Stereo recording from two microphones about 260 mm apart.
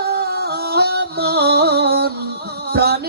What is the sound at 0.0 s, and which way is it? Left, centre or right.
Music, right.